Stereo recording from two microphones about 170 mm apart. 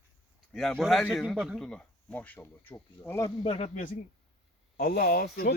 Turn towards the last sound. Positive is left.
turn(degrees=65)  # may be behind; listen again after turning